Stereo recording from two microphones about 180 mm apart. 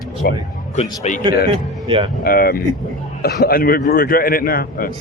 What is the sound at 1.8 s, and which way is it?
Speech, 30° right (ahead or behind).